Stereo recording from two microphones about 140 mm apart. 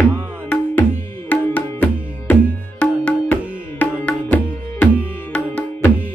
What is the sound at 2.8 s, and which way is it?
Music, 10° left (ahead or behind).